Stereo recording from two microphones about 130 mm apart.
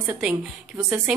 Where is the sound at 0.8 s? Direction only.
5° right (ahead or behind).